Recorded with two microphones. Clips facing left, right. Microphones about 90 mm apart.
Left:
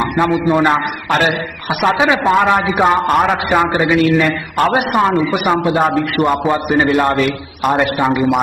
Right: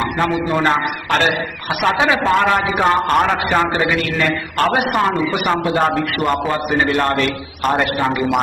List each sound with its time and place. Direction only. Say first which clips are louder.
0.5 s a man's voice: left 3 dB; 10° left (ahead or behind)